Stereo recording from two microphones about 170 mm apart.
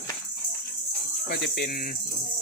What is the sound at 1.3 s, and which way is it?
Speech, 70° left (ahead or behind).